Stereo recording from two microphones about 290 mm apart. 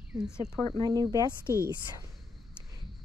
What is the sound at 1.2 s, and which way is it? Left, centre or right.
Speech, centre.